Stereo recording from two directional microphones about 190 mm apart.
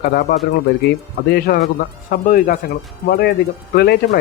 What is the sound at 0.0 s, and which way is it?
Speech, 55° left (ahead or behind).